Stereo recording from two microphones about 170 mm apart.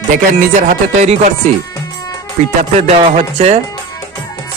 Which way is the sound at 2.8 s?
40° right (ahead or behind).